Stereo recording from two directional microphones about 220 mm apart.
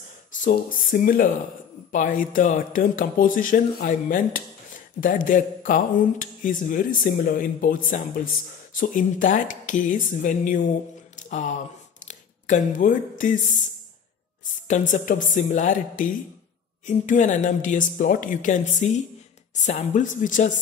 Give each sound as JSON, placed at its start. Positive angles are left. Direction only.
{"t": 0.4, "sound": "speech", "side_deg": 40}
{"t": 11.1, "sound": "a sound", "side_deg": 35}
{"t": 13.2, "sound": "speech", "side_deg": 35}